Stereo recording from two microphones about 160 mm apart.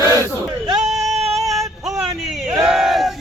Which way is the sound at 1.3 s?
Centre (ahead or behind).